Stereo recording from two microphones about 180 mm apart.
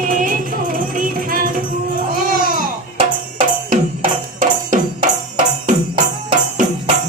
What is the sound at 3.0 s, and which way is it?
Music, 50° right (ahead or behind).